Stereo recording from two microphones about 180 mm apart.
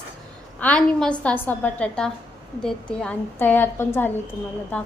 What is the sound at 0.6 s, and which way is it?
A woman's voice, 5° left (ahead or behind).